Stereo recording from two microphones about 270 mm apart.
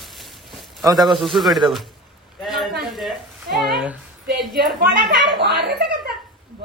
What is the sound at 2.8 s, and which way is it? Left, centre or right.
Sizzle, centre.